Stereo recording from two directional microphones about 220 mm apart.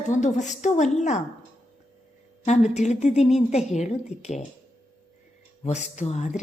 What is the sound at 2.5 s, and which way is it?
A woman's voice, 30° left (ahead or behind).